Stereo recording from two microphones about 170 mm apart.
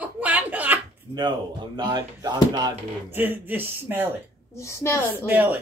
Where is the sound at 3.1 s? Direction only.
10° right (ahead or behind).